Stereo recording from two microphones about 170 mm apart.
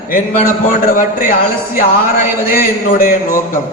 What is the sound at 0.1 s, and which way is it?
A man's voice, 55° left (ahead or behind).